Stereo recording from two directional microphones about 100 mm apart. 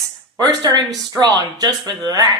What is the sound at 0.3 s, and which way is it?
Speech, 40° right (ahead or behind).